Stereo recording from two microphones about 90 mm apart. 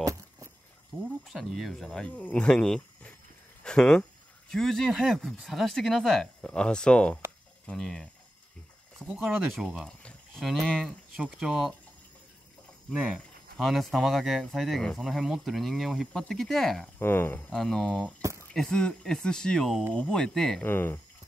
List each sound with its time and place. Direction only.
0.0 s a sound: 35° right (ahead or behind)
1.2 s speech: centre (ahead or behind)
2.0 s speech: 15° left (ahead or behind)
9.6 s speech: centre (ahead or behind)
12.9 s speech: 15° right (ahead or behind)
13.6 s speech: centre (ahead or behind)
17.0 s speech: 25° left (ahead or behind)
17.5 s speech: 5° left (ahead or behind)
20.6 s speech: 25° left (ahead or behind)